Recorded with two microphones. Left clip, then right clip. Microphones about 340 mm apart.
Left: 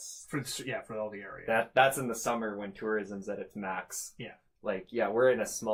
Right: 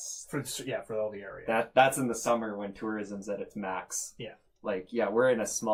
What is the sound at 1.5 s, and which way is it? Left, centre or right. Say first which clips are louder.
Speech: right 1 dB; left.